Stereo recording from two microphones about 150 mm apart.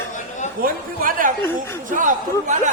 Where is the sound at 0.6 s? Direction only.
70° right (ahead or behind).